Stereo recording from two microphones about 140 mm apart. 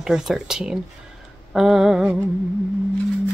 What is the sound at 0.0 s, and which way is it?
Speech, 5° right (ahead or behind).